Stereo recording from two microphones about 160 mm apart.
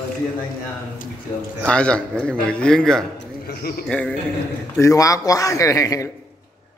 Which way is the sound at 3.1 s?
75° left (ahead or behind).